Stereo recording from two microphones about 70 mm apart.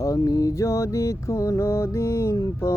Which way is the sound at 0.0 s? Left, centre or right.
Left.